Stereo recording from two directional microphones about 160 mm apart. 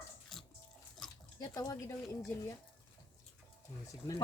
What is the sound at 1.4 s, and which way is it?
Speech, 20° left (ahead or behind).